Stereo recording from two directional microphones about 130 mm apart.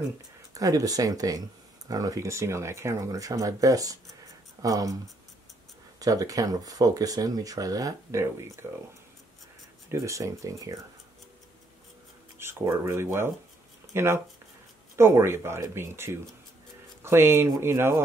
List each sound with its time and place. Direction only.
0.6 s speech: 25° right (ahead or behind)
5.9 s speech: 25° right (ahead or behind)
9.8 s speech: 25° right (ahead or behind)
12.4 s speech: 20° right (ahead or behind)